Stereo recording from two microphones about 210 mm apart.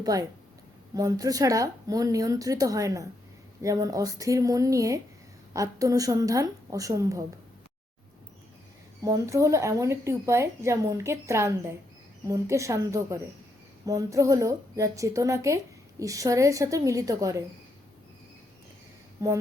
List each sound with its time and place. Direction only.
0.0 s a woman's voice: 15° right (ahead or behind)
9.0 s a woman's voice: 15° right (ahead or behind)
19.2 s a woman's voice: 15° right (ahead or behind)